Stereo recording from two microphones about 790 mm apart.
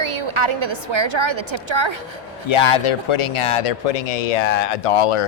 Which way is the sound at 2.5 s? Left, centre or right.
Left.